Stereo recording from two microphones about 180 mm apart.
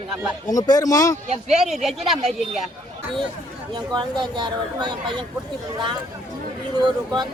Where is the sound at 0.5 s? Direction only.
20° left (ahead or behind).